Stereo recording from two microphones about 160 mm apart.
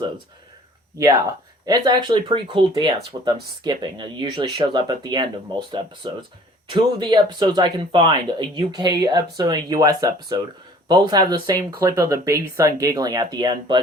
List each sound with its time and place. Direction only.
1.6 s speech: 25° right (ahead or behind)